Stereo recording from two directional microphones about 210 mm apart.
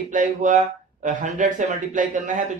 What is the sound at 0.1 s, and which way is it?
Speech, 40° right (ahead or behind).